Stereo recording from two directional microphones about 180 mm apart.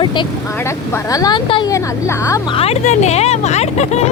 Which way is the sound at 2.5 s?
35° left (ahead or behind).